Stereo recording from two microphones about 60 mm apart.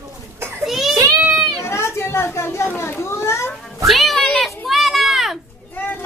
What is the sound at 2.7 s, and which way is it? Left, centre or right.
Children playing, left.